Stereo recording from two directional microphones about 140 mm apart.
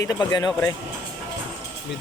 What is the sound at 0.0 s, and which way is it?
Speech, 25° left (ahead or behind).